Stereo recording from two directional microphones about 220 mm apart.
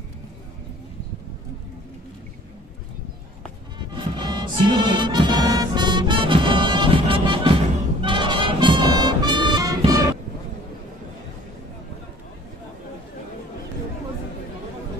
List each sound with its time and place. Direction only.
3.9 s music: 20° right (ahead or behind)